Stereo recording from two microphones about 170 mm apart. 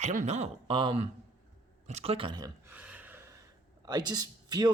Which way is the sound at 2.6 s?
10° right (ahead or behind).